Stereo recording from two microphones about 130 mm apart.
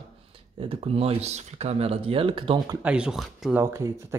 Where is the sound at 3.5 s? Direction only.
20° right (ahead or behind).